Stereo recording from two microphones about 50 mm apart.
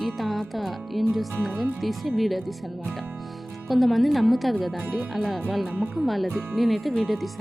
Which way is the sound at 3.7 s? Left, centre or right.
Centre.